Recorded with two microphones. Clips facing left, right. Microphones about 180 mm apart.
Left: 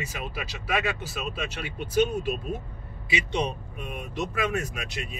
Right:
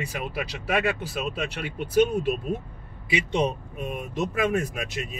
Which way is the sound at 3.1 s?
45° right (ahead or behind).